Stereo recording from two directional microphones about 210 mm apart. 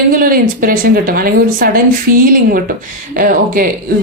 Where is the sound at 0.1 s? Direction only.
45° right (ahead or behind).